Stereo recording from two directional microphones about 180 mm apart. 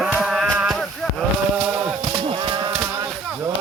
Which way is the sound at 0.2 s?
Centre (ahead or behind).